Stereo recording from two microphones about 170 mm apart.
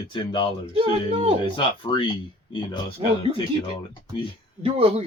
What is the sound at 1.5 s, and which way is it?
Speech, 30° left (ahead or behind).